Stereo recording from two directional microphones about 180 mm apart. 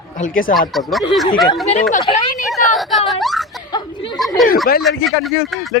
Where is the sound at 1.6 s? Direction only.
35° left (ahead or behind).